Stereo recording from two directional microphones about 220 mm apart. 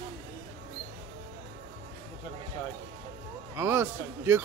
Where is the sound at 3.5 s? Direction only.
10° right (ahead or behind).